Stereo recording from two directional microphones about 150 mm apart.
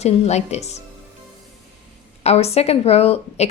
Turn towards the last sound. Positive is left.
turn(degrees=40)  # may be behind; listen again after turning